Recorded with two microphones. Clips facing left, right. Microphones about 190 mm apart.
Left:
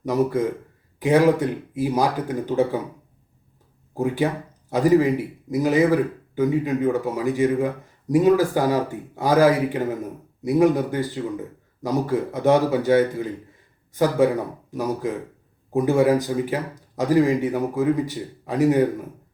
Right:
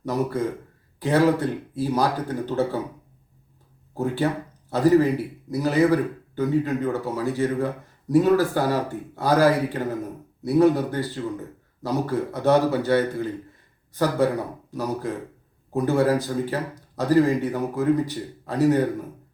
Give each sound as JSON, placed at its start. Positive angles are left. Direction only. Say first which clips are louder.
{"t": 0.0, "sound": "a man's voice", "louder": "left 4 dB", "side_deg": 15}
{"t": 3.9, "sound": "a man's voice", "louder": "left 2 dB", "side_deg": 15}
{"t": 15.7, "sound": "a man's voice", "louder": "left 3 dB", "side_deg": 15}